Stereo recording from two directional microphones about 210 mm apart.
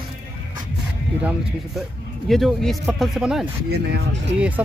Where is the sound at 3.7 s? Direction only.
55° right (ahead or behind).